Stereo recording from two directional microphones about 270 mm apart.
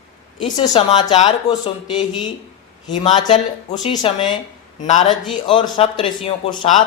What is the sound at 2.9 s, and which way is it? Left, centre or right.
Mantra, centre.